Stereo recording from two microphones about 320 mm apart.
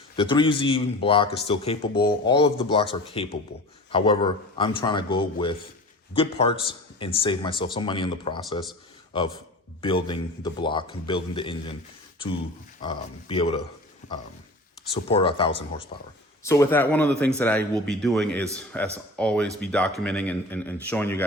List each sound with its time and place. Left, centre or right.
0.2 s a man's voice: centre
12.8 s a man's voice: centre
15.1 s a man's voice: centre